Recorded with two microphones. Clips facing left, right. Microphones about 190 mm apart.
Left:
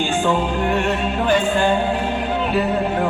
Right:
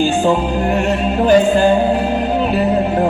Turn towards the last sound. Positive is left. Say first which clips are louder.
# right 6 dB
turn(degrees=-40)  # may be behind; listen again after turning